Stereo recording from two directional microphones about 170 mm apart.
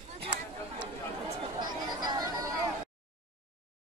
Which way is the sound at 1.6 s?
25° right (ahead or behind).